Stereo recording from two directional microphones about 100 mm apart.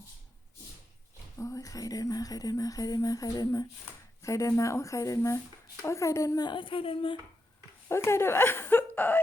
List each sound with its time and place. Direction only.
1.4 s speech: 30° left (ahead or behind); by 7.2 s 65° left (ahead or behind)
7.9 s speech: 25° left (ahead or behind)